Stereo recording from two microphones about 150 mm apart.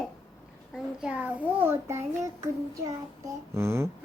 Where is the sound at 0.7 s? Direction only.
5° right (ahead or behind).